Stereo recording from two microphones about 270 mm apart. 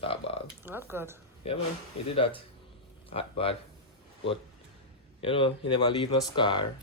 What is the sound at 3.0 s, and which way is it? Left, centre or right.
Speech, left.